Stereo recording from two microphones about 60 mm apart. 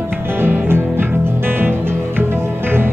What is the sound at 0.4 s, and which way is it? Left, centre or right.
Music, right.